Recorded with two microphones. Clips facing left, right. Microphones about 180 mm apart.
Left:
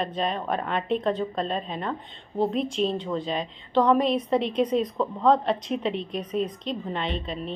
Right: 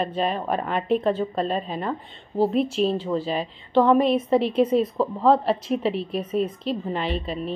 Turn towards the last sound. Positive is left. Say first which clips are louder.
# right 3 dB
turn(degrees=-5)  # may be behind; listen again after turning